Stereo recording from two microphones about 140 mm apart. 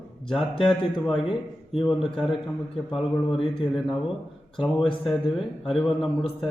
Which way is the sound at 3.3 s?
40° left (ahead or behind).